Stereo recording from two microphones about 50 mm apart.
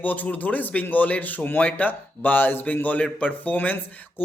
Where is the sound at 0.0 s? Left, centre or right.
Left.